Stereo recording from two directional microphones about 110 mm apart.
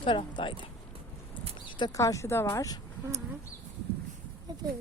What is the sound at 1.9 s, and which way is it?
Speech, 30° left (ahead or behind).